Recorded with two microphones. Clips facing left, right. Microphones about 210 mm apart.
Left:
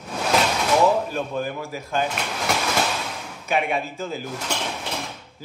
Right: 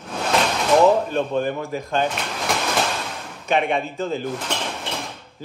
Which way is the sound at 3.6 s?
Centre (ahead or behind).